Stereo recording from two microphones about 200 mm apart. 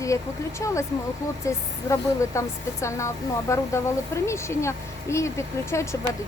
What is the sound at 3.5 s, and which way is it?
Speech, 15° left (ahead or behind).